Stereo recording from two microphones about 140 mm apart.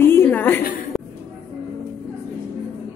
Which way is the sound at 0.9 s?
Centre (ahead or behind).